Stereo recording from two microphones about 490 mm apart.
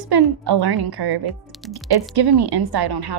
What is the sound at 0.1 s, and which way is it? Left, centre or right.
A woman's voice, right.